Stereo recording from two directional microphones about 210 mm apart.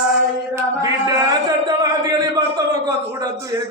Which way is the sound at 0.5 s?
15° right (ahead or behind).